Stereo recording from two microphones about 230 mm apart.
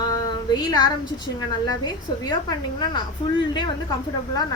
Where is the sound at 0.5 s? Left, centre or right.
Centre.